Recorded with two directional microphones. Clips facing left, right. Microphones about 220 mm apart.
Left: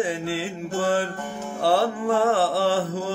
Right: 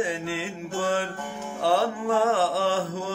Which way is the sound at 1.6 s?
35° left (ahead or behind).